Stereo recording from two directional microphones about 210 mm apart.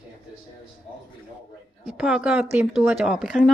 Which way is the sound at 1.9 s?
5° right (ahead or behind).